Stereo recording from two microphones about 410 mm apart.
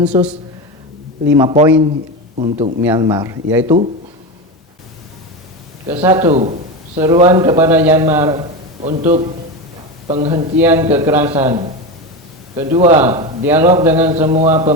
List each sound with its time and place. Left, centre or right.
0.0 s a man's voice: centre
1.4 s a man's voice: centre
5.9 s a man's voice: centre
14.2 s a man's voice: centre